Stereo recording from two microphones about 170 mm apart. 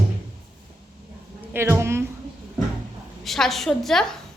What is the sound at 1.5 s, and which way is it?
Speech, 15° right (ahead or behind).